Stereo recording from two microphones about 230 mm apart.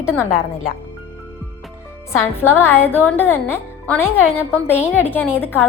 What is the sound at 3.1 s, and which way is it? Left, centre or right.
Speech, centre.